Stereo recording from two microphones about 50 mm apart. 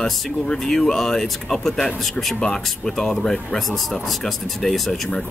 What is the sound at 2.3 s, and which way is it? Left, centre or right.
Speech, centre.